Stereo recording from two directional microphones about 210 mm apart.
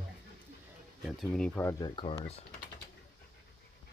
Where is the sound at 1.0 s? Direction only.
Centre (ahead or behind); by 2.3 s 25° left (ahead or behind).